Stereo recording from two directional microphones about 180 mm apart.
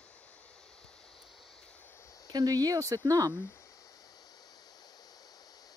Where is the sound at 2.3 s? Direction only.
20° right (ahead or behind).